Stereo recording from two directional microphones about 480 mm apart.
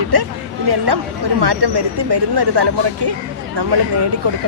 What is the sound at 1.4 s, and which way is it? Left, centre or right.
Speech, right.